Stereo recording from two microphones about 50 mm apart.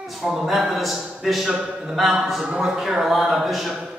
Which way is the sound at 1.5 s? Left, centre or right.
Centre.